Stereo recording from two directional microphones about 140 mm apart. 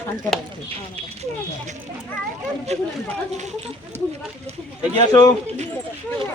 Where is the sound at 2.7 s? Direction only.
50° right (ahead or behind).